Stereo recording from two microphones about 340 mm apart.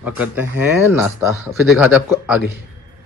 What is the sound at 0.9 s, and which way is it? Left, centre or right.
Speech, centre.